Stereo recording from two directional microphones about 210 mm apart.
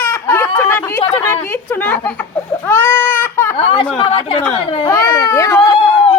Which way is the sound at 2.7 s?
10° left (ahead or behind).